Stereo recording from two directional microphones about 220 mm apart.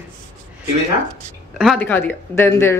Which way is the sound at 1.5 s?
5° left (ahead or behind).